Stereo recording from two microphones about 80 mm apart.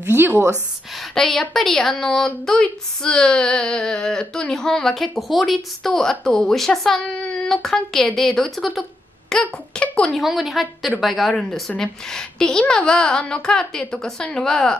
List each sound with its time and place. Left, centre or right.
0.0 s speech: right
1.1 s a woman's voice: centre
9.3 s a woman's voice: centre